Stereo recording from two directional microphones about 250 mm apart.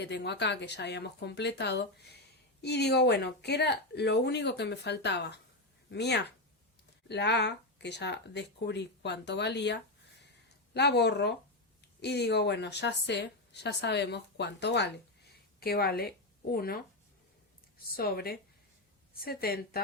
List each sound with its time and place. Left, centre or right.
0.0 s a woman's voice: left
17.9 s speech: left